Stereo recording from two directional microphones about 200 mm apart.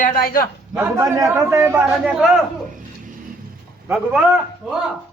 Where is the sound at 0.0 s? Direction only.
45° left (ahead or behind).